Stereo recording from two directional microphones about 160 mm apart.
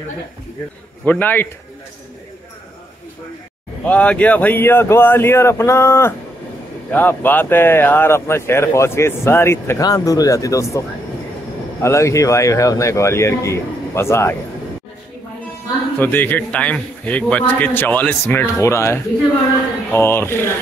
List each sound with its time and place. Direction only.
1.0 s speech: 10° left (ahead or behind)
3.8 s speech: 10° left (ahead or behind)
16.0 s speech: 10° left (ahead or behind)